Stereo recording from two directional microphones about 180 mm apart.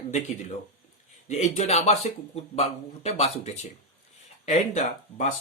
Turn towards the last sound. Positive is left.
turn(degrees=40)  # may be behind; listen again after turning